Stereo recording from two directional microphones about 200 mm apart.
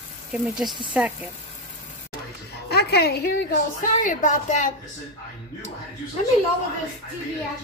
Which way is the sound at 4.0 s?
40° left (ahead or behind).